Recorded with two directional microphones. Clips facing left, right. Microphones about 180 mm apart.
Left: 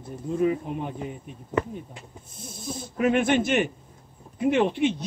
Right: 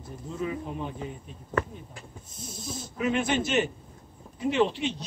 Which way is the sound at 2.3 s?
55° left (ahead or behind).